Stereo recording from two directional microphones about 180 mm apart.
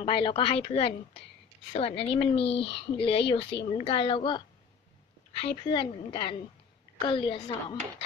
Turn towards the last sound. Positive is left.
turn(degrees=30)  # may be behind; listen again after turning